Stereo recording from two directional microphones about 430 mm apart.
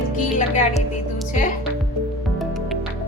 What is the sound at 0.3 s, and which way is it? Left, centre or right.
Speech, centre.